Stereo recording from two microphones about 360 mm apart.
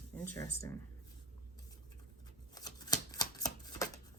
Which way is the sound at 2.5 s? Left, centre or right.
Centre.